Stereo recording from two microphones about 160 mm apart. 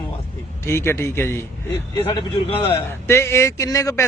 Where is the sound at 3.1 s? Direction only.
15° left (ahead or behind).